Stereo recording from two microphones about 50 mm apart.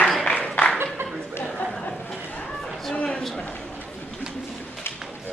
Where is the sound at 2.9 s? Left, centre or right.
Left.